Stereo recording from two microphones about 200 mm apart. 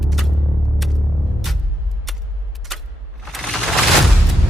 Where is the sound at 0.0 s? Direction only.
Centre (ahead or behind).